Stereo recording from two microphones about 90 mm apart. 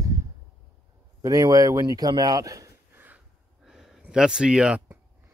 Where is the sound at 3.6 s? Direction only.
5° right (ahead or behind).